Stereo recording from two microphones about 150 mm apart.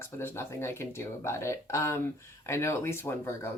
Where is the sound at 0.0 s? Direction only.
15° left (ahead or behind).